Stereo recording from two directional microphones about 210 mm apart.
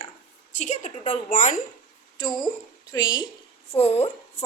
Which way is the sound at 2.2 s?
20° left (ahead or behind).